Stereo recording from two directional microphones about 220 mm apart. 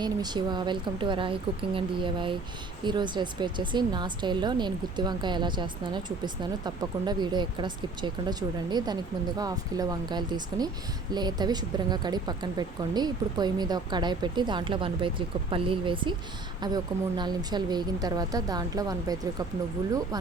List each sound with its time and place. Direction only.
0.0 s speech: 20° right (ahead or behind)